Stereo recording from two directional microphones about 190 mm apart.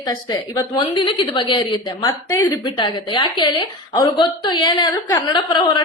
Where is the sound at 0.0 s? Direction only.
25° left (ahead or behind).